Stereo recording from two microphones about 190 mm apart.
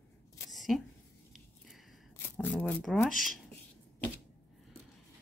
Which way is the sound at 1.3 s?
Centre (ahead or behind).